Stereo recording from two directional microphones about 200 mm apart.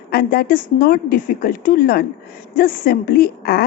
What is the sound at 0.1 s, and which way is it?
A woman's voice, 50° left (ahead or behind).